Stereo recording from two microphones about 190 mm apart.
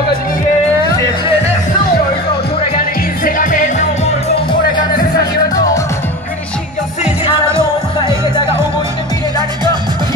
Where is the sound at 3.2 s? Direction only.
45° left (ahead or behind).